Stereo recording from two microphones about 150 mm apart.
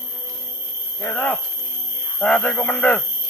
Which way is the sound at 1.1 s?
15° left (ahead or behind).